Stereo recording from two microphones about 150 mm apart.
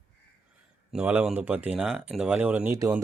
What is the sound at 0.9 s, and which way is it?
Speech, 10° right (ahead or behind).